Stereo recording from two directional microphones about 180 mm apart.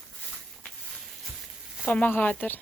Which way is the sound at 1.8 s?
10° left (ahead or behind).